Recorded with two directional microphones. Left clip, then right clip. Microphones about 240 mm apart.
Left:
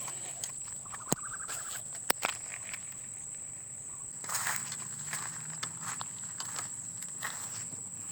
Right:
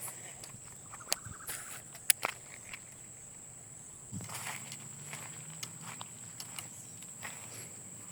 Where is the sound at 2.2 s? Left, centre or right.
Left.